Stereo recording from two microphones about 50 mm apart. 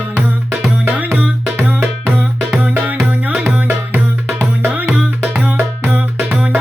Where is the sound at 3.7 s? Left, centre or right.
Right.